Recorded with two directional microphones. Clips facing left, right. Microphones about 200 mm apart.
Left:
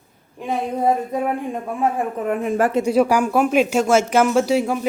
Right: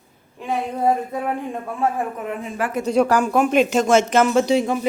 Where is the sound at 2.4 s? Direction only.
45° left (ahead or behind).